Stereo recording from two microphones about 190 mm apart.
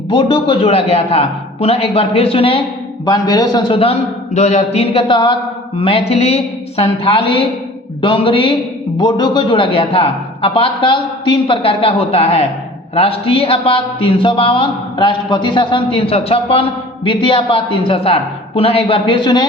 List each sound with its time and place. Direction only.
0.1 s a man's voice: 25° left (ahead or behind)
3.1 s a man's voice: 20° left (ahead or behind)